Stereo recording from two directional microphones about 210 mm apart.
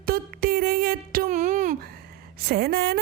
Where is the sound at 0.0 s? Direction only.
45° right (ahead or behind).